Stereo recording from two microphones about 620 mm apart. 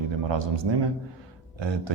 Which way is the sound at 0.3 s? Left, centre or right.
Right.